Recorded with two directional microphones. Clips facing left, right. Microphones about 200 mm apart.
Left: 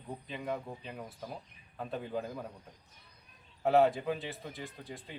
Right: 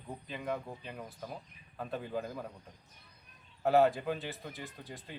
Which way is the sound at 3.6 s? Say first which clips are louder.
Even; centre (ahead or behind).